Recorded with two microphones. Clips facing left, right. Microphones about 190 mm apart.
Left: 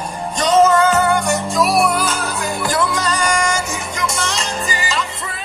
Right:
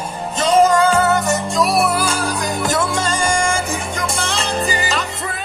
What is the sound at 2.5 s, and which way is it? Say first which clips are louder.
Music: left 2 dB; 20° right (ahead or behind).